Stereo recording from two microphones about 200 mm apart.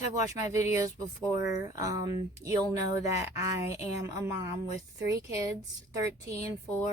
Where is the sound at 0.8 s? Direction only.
15° right (ahead or behind).